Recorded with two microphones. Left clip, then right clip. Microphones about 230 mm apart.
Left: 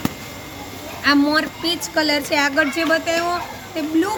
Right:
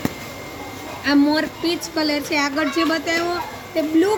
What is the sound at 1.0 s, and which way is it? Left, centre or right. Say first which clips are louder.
A woman's voice: left 1 dB; left.